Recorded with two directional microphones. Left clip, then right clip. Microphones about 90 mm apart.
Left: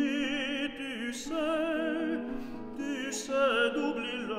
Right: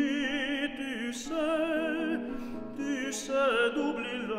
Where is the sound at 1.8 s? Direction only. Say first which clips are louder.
Right 1 dB; 65° right (ahead or behind).